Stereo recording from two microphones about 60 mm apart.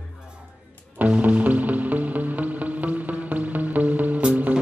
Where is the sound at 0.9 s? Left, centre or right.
Right.